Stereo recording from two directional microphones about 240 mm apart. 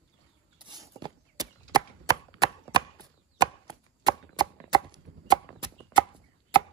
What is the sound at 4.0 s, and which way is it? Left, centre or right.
Chopping, centre.